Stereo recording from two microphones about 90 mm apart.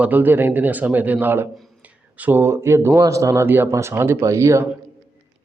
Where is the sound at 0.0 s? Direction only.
20° right (ahead or behind).